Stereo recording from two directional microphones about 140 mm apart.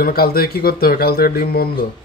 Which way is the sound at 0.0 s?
90° left.